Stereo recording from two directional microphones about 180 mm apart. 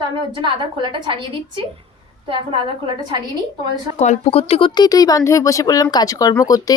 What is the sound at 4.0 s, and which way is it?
Speech, 35° left (ahead or behind).